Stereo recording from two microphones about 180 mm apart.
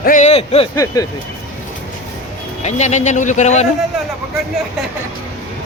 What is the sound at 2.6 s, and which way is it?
Speech, 40° left (ahead or behind).